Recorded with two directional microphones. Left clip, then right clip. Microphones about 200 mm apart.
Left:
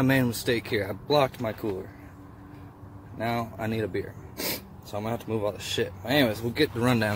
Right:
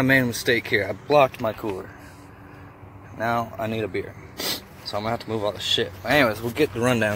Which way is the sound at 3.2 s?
15° left (ahead or behind).